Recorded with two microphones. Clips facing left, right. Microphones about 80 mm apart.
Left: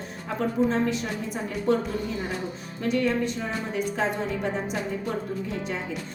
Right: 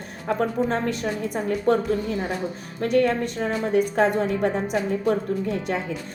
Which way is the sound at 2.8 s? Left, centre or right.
Right.